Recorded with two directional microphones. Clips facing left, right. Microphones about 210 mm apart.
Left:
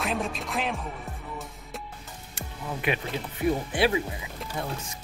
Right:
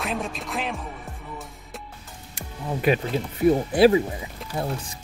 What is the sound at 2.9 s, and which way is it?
Speech, 40° right (ahead or behind).